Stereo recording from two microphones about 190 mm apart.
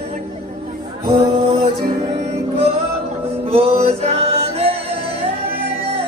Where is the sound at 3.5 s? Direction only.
30° right (ahead or behind).